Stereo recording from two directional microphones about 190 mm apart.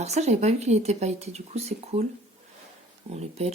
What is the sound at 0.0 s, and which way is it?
Speech, 35° right (ahead or behind).